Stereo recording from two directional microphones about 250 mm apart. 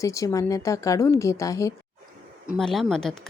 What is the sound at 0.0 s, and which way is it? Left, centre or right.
A woman's voice, centre.